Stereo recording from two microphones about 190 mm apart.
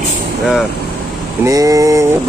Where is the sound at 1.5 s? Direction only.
20° right (ahead or behind).